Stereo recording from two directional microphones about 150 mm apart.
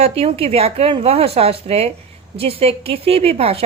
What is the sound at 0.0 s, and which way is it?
A woman's voice, 40° right (ahead or behind).